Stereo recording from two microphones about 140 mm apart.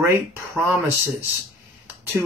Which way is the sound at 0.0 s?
15° right (ahead or behind).